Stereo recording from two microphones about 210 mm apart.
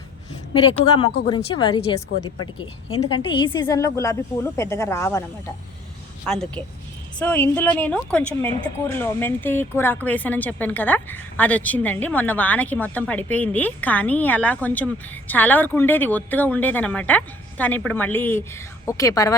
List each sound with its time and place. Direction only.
1.5 s a woman's voice: 20° left (ahead or behind)
6.2 s a woman's voice: 5° left (ahead or behind)